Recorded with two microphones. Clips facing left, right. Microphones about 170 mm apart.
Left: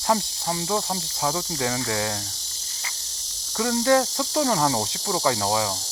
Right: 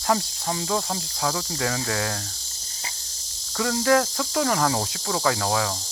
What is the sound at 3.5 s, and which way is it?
Cricket, 25° left (ahead or behind).